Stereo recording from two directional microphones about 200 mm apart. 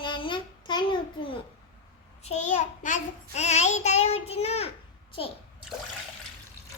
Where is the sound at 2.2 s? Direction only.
35° left (ahead or behind).